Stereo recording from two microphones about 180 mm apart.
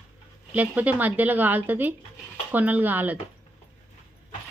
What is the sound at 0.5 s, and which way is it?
A woman's voice, 10° right (ahead or behind).